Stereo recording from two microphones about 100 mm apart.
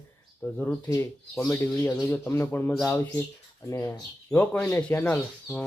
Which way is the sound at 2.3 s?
25° left (ahead or behind).